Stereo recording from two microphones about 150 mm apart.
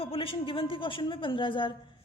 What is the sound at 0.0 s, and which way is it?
A woman's voice, 40° left (ahead or behind).